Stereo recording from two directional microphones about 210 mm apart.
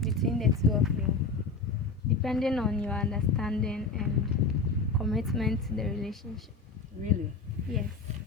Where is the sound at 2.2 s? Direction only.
Centre (ahead or behind).